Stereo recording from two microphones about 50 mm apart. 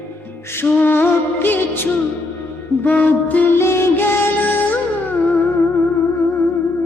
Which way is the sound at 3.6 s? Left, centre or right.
Left.